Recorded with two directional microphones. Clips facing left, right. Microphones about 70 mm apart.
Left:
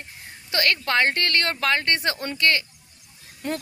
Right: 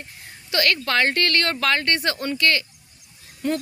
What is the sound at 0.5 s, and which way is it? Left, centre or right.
Speech, left.